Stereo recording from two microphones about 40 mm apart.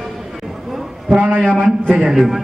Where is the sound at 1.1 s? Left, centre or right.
Right.